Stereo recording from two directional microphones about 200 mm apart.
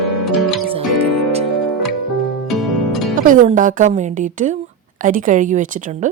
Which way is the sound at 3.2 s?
40° right (ahead or behind).